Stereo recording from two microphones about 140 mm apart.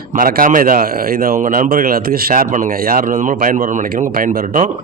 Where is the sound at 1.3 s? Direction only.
65° right (ahead or behind).